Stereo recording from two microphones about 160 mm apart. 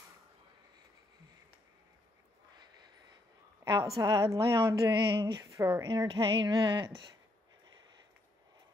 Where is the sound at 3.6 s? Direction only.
20° right (ahead or behind).